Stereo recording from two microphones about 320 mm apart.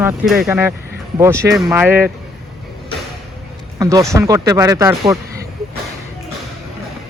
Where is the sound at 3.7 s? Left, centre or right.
Centre.